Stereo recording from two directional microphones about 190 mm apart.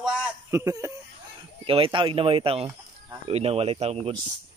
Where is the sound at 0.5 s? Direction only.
15° right (ahead or behind).